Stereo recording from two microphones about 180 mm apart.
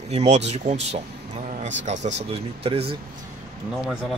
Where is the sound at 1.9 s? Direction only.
40° right (ahead or behind).